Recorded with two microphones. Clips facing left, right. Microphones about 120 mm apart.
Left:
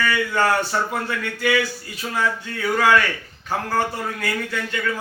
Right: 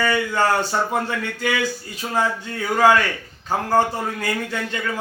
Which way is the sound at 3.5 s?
25° right (ahead or behind).